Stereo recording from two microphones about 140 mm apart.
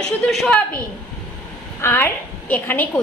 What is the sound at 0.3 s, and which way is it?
Speech, centre (ahead or behind).